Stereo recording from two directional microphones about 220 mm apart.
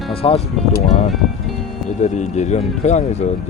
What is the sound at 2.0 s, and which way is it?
Speech, 30° left (ahead or behind).